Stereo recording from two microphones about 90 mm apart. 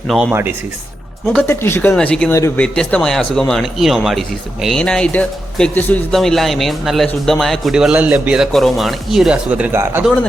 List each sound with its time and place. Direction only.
0.1 s speech: 5° right (ahead or behind)
1.5 s speech: 25° left (ahead or behind)
2.0 s speech: 10° left (ahead or behind)
4.8 s speech: 10° left (ahead or behind); by 8.4 s 10° right (ahead or behind)
8.5 s speech: centre (ahead or behind)
9.5 s speech: 15° right (ahead or behind)